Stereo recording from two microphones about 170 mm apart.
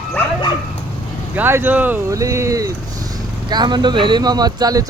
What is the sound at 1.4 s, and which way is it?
Speech, 10° right (ahead or behind).